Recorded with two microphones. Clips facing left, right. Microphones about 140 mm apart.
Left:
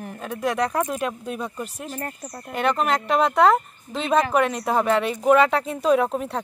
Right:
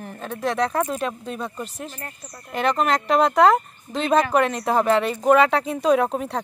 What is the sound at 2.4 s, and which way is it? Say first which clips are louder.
Speech: right 1 dB; centre (ahead or behind).